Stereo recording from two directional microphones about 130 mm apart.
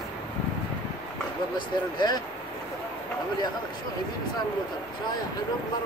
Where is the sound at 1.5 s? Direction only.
35° left (ahead or behind).